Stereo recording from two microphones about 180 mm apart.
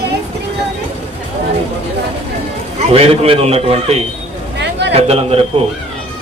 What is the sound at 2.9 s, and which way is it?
A man's voice, 35° right (ahead or behind).